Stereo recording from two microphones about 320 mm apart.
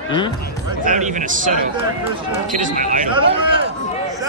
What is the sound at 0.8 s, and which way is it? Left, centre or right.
Speech, right.